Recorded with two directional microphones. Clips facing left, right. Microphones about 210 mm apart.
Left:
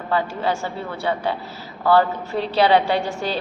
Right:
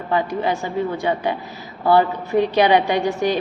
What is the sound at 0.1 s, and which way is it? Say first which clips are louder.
A woman's voice: right 2 dB; 15° right (ahead or behind).